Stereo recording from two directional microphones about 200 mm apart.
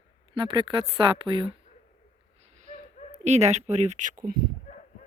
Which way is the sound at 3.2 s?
35° right (ahead or behind).